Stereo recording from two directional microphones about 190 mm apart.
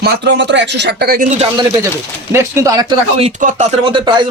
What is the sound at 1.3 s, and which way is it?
Speech, 35° right (ahead or behind).